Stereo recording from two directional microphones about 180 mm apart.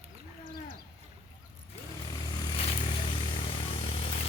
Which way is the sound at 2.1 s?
30° left (ahead or behind).